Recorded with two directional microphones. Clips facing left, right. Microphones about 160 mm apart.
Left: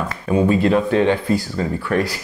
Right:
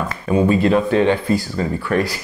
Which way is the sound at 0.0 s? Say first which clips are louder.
Right 1 dB; 25° right (ahead or behind).